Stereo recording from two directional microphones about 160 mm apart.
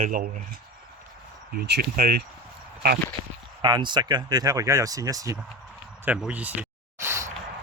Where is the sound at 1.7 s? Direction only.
70° right (ahead or behind).